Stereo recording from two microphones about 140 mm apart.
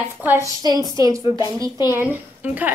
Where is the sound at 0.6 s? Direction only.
25° right (ahead or behind).